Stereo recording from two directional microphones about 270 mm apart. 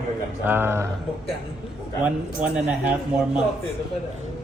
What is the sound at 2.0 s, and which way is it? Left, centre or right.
Speech, centre.